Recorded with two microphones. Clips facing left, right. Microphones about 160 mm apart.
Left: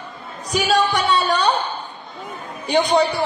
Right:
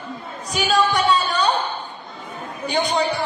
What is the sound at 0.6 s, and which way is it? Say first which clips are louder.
Music: left 1 dB; 35° left (ahead or behind).